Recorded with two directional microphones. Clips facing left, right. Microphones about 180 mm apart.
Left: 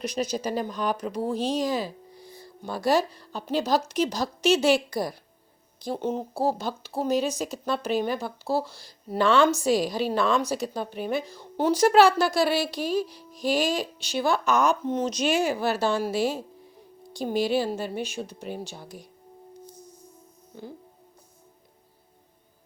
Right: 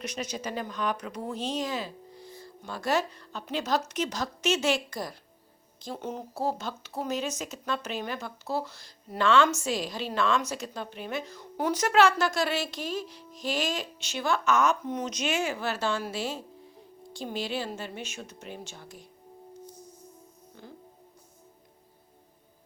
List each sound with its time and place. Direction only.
0.0 s speech: 35° left (ahead or behind)
2.1 s music: 10° left (ahead or behind)
2.4 s speech: 35° left (ahead or behind)